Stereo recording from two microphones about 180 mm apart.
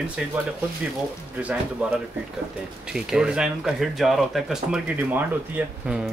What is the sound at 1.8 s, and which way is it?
Speech, 10° right (ahead or behind).